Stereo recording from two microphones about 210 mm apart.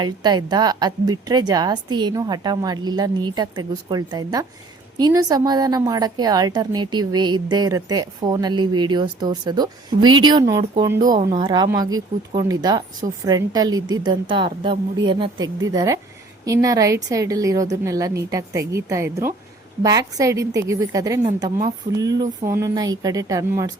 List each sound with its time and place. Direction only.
0.0 s a woman's voice: 20° right (ahead or behind)
11.0 s speech: 40° right (ahead or behind)
11.3 s a woman's voice: 20° right (ahead or behind)